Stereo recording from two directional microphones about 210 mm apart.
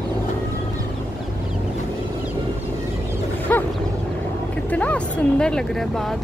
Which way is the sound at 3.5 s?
10° left (ahead or behind).